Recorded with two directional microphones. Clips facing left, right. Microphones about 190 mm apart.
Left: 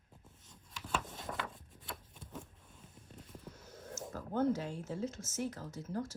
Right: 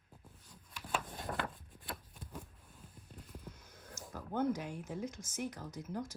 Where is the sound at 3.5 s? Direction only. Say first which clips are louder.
Left 2 dB; 5° left (ahead or behind).